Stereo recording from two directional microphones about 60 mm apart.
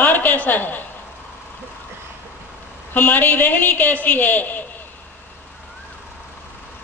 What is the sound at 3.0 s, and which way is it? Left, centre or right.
A woman's voice, left.